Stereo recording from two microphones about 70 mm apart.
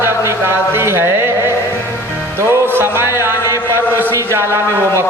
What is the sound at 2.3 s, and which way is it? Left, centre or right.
Music, right.